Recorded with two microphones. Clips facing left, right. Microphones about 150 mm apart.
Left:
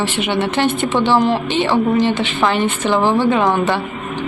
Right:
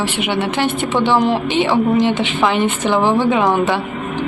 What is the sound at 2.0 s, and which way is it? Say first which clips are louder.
Speech: right 1 dB; 15° right (ahead or behind).